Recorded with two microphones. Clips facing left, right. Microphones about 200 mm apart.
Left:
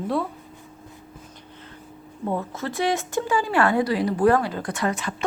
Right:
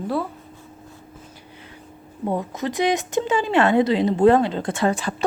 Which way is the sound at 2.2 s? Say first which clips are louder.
Right 3 dB; 15° right (ahead or behind).